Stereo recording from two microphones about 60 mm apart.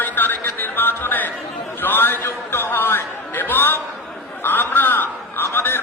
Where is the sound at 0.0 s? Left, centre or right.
Left.